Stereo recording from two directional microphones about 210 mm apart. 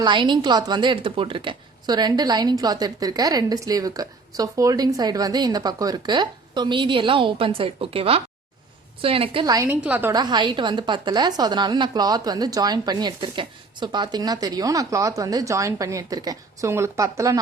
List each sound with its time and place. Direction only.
0.0 s a woman's voice: 20° right (ahead or behind)